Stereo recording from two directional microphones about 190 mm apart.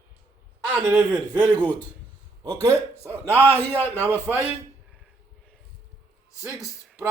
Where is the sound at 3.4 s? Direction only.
10° left (ahead or behind).